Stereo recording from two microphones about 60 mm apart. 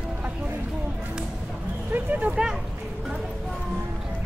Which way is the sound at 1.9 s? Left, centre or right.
Right.